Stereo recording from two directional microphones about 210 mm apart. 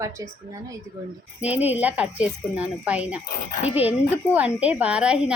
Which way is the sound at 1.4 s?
5° right (ahead or behind).